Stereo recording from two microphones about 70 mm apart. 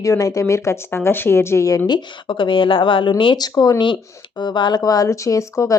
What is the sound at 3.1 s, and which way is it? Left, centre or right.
Speech, left.